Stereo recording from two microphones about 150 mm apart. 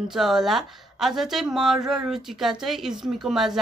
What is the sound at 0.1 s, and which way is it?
Speech, 5° right (ahead or behind).